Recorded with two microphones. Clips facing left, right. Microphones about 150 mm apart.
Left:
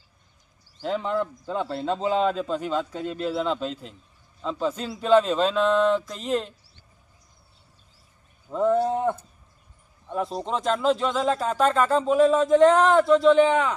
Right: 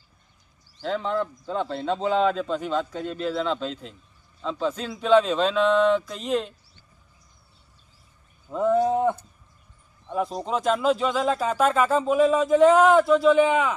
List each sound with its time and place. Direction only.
0.8 s speech: 5° left (ahead or behind)
8.4 s speech: centre (ahead or behind)